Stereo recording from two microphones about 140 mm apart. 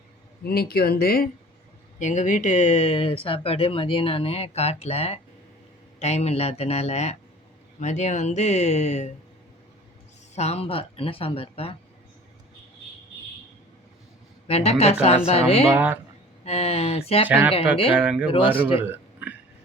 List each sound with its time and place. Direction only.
0.4 s speech: 90° left
2.0 s speech: 60° left (ahead or behind)
10.3 s speech: 50° left (ahead or behind)
14.4 s speech: 45° left (ahead or behind)
15.7 s speech: 10° right (ahead or behind)
16.4 s speech: 45° left (ahead or behind)
17.2 s speech: 10° right (ahead or behind)
18.8 s a sound: 10° right (ahead or behind)